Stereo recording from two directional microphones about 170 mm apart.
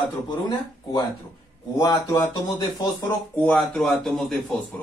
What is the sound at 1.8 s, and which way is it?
Speech, 15° left (ahead or behind).